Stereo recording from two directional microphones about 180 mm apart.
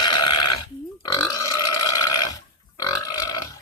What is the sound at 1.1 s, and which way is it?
Burping, 20° left (ahead or behind).